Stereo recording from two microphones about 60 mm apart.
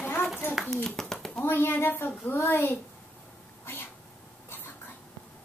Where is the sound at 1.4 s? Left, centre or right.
Left.